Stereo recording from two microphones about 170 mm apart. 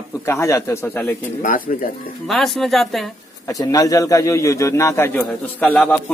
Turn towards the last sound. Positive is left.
turn(degrees=5)  # may be behind; listen again after turning